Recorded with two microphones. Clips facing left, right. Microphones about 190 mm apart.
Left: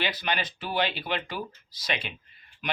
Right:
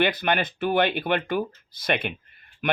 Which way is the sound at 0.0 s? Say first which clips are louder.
Right 7 dB; 55° right (ahead or behind).